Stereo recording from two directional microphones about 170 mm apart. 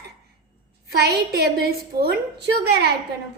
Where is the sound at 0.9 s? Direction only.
75° right (ahead or behind).